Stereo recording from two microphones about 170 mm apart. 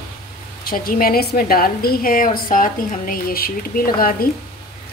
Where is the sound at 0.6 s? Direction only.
60° left (ahead or behind).